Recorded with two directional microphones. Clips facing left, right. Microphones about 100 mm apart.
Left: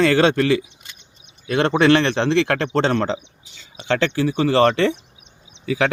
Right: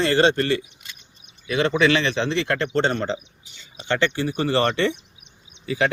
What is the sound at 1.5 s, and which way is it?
A man's voice, 60° left (ahead or behind).